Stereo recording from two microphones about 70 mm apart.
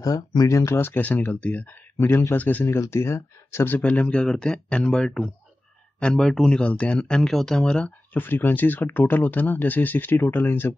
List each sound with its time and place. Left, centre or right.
0.0 s speech: left
0.5 s speech: left
0.7 s speech: left
1.0 s speech: left
2.0 s speech: left
2.3 s speech: left
3.8 s speech: centre
8.1 s speech: left